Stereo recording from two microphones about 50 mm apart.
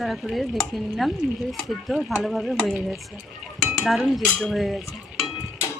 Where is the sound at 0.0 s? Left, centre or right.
Centre.